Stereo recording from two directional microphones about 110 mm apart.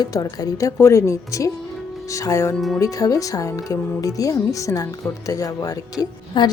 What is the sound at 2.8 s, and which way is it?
A woman's voice, 30° left (ahead or behind).